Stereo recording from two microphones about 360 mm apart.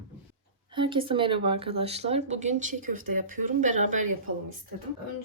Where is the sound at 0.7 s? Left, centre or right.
Centre.